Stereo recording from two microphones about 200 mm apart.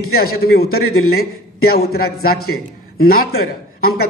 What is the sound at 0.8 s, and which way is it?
Speech, 90° left.